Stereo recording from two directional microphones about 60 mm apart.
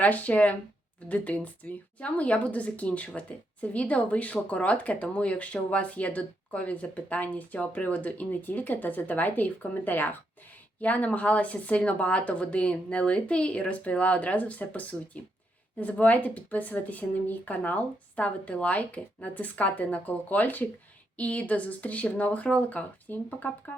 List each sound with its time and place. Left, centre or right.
0.0 s speech: left